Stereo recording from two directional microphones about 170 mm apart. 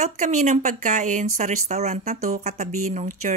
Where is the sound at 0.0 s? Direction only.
45° right (ahead or behind).